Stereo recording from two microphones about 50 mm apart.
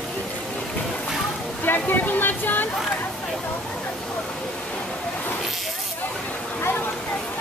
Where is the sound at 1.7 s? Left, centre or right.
Left.